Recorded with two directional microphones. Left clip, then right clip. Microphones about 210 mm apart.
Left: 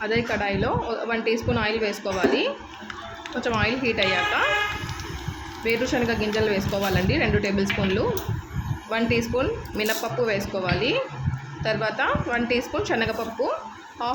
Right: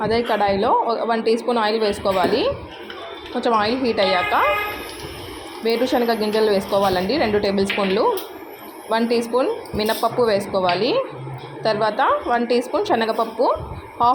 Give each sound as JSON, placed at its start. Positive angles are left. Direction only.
{"t": 0.0, "sound": "a woman's voice", "side_deg": -15}
{"t": 5.6, "sound": "a woman's voice", "side_deg": -15}